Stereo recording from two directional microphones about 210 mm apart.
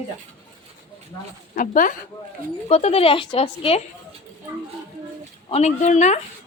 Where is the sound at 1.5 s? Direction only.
40° left (ahead or behind).